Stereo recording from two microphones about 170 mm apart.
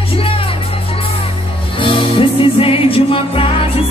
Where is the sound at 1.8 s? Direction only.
30° left (ahead or behind).